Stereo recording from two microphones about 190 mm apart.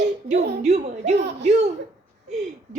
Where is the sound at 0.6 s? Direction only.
35° right (ahead or behind).